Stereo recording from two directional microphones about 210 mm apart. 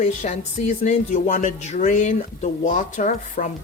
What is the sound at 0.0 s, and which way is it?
Speech, 35° left (ahead or behind).